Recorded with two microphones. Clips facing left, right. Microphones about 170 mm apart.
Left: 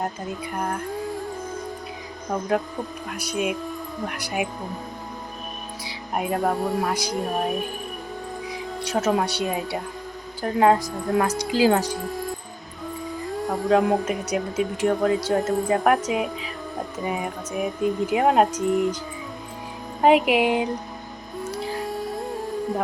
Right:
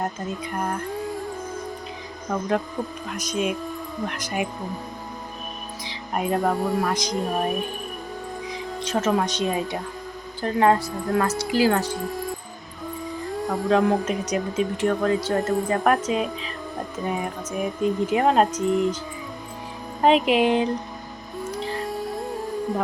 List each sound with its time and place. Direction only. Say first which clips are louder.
0.0 s music: right 1 dB; 5° left (ahead or behind)
2.3 s speech: even; 10° left (ahead or behind)
5.8 s speech: right 1 dB; 10° left (ahead or behind)
10.9 s speech: even; centre (ahead or behind)
11.2 s speech: left 1 dB; 15° left (ahead or behind)
11.9 s music: even; centre (ahead or behind)
13.3 s speech: left 1 dB; centre (ahead or behind)
20.0 s speech: left 1 dB; 15° left (ahead or behind)
21.5 s music: even; 5° left (ahead or behind)